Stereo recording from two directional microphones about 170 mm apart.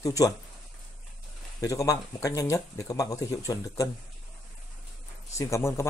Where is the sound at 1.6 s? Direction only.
20° left (ahead or behind).